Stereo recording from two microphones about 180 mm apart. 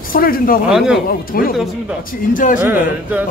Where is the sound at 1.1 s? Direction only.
55° left (ahead or behind).